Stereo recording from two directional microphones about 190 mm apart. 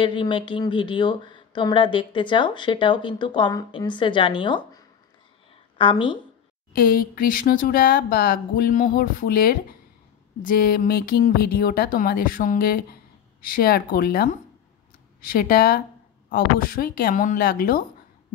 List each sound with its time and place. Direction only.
0.0 s speech: 25° left (ahead or behind)
6.7 s speech: 50° left (ahead or behind)